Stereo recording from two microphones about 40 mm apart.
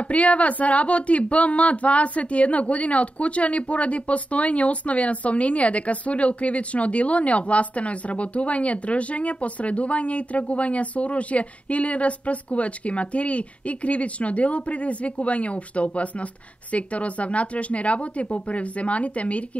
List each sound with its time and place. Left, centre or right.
0.0 s speech: left